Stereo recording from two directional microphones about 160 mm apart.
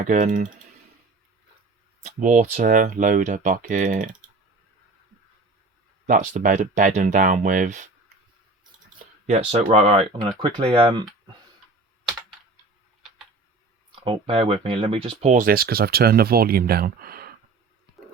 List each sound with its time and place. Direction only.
0.0 s speech: 50° right (ahead or behind)
2.0 s speech: 50° right (ahead or behind)
6.1 s speech: 55° right (ahead or behind)
9.2 s speech: 40° right (ahead or behind)
13.9 s speech: 35° right (ahead or behind)
15.3 s speech: 60° right (ahead or behind)